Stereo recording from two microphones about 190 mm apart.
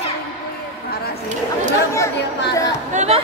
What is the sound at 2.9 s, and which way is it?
Chatter, 35° right (ahead or behind).